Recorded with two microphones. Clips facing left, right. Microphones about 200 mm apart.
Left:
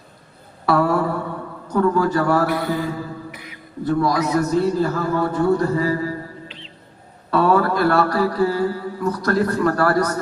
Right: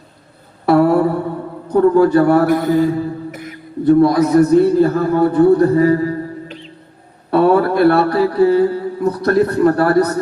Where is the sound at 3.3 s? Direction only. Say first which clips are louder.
Right 7 dB; 45° right (ahead or behind).